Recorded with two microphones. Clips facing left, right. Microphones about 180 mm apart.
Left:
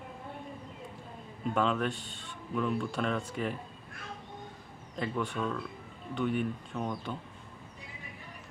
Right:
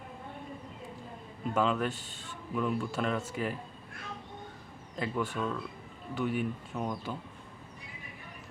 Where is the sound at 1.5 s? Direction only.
Centre (ahead or behind).